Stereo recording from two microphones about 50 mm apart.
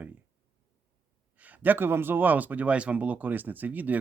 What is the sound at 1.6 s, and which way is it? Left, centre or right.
Speech, right.